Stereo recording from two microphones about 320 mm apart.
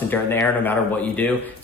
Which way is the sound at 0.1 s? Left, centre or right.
Centre.